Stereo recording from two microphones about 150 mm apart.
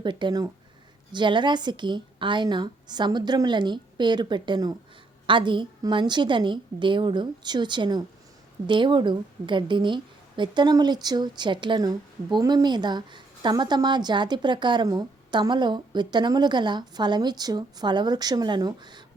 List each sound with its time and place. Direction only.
0.0 s a woman's voice: 30° right (ahead or behind)